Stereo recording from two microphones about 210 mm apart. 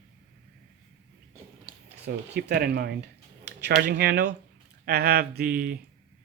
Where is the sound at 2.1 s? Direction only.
50° right (ahead or behind).